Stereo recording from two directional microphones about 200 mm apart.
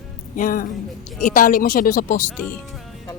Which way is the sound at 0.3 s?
40° left (ahead or behind).